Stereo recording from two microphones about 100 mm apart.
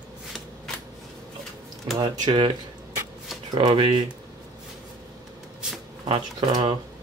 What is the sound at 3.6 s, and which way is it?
Speech, 60° right (ahead or behind).